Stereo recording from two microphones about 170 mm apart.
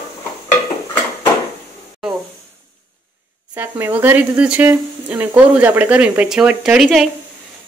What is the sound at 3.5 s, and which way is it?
Speech, 10° right (ahead or behind).